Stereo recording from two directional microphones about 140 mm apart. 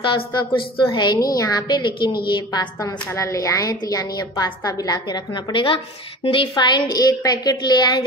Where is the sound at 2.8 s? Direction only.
20° left (ahead or behind).